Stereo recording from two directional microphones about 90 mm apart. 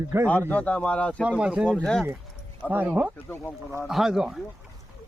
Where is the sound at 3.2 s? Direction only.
20° left (ahead or behind).